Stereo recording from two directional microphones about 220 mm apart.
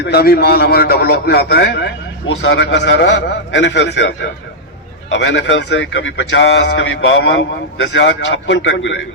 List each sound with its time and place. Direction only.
0.0 s a man's voice: 45° left (ahead or behind)